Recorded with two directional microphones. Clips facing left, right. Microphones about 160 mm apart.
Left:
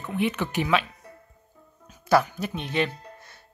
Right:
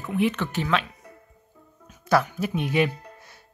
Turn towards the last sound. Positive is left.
turn(degrees=-10)  # may be behind; listen again after turning